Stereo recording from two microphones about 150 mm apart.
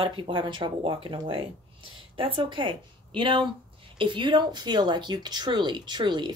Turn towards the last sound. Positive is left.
turn(degrees=-30)  # may be behind; listen again after turning